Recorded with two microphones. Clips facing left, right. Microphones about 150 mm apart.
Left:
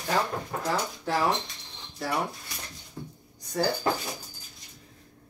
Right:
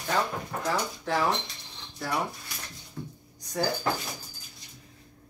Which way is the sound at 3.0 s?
20° left (ahead or behind).